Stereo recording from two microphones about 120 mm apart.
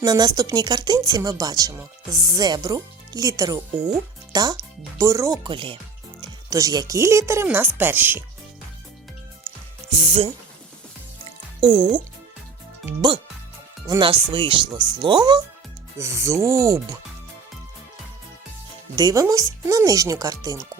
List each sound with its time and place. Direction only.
0.0 s a child's voice: 35° right (ahead or behind)
5.4 s speech: 45° right (ahead or behind)
6.5 s speech: 30° right (ahead or behind)
9.9 s speech: 50° right (ahead or behind)
11.6 s speech: 40° right (ahead or behind)
14.0 s speech: 45° right (ahead or behind)
16.0 s speech: 25° right (ahead or behind)
18.9 s speech: 30° right (ahead or behind)